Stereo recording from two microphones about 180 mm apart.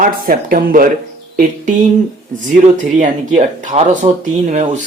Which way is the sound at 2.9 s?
45° right (ahead or behind).